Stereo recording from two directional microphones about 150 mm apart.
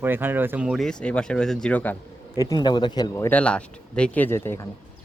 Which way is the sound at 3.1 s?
15° left (ahead or behind).